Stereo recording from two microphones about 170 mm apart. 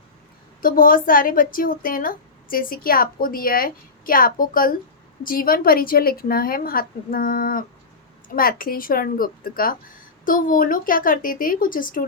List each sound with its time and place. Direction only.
0.6 s a woman's voice: 55° left (ahead or behind)